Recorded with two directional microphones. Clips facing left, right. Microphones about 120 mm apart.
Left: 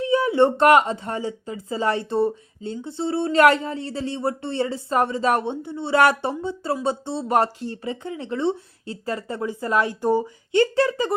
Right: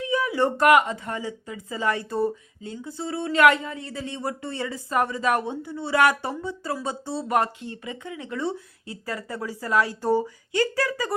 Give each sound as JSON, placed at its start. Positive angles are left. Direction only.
{"t": 0.0, "sound": "speech", "side_deg": 30}
{"t": 10.5, "sound": "speech", "side_deg": 25}